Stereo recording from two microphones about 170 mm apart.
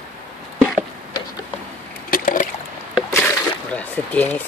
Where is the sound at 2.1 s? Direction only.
55° left (ahead or behind).